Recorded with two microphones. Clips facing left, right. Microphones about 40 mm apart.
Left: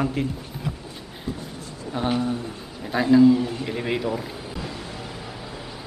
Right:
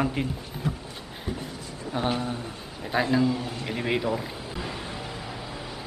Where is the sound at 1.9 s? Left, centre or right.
Centre.